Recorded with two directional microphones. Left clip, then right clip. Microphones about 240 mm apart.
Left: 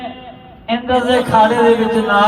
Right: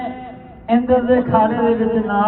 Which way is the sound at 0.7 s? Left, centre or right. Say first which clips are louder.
Even; left.